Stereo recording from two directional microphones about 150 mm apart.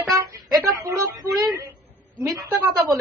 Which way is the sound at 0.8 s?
25° right (ahead or behind).